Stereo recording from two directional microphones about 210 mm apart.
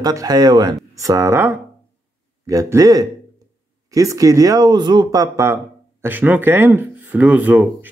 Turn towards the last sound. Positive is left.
turn(degrees=-10)  # may be behind; listen again after turning